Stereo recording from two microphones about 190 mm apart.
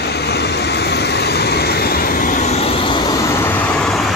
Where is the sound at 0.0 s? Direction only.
60° left (ahead or behind).